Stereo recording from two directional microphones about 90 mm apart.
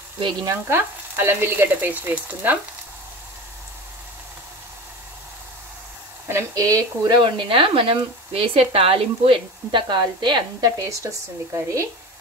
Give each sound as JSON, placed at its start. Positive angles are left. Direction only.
{"t": 0.7, "sound": "frying", "side_deg": -25}
{"t": 6.2, "sound": "speech", "side_deg": -35}
{"t": 7.2, "sound": "speech", "side_deg": -70}
{"t": 10.6, "sound": "speech", "side_deg": -35}